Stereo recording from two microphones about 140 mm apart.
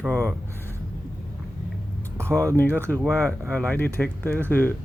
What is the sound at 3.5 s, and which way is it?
Speech, 10° left (ahead or behind).